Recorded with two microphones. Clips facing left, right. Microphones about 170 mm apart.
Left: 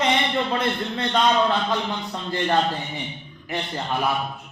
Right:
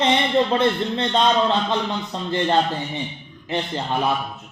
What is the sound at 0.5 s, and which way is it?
A man's voice, 25° right (ahead or behind).